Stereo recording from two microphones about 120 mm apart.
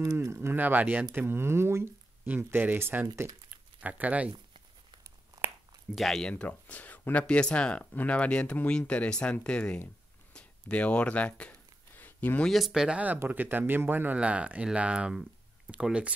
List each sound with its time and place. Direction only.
0.0 s speech: 25° right (ahead or behind)
5.9 s speech: centre (ahead or behind)
10.3 s a sound: 10° left (ahead or behind)
12.4 s speech: centre (ahead or behind)